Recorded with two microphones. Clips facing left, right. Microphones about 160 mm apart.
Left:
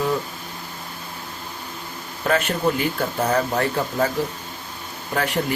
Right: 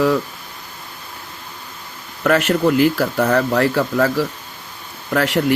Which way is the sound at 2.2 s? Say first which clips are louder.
Right 5 dB; 75° right (ahead or behind).